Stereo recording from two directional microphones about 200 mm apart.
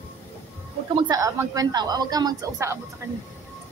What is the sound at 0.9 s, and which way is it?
Speech, 20° right (ahead or behind).